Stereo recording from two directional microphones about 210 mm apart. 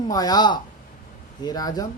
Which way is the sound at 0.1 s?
20° left (ahead or behind).